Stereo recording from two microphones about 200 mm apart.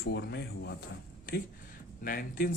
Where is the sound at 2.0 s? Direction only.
45° left (ahead or behind).